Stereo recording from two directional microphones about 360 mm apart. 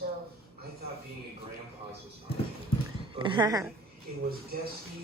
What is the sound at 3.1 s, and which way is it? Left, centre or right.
Speech, centre.